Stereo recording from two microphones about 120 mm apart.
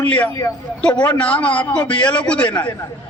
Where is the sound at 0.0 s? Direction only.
15° left (ahead or behind).